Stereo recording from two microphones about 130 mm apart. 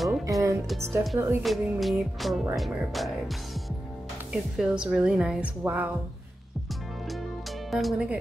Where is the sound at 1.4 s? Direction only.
Centre (ahead or behind).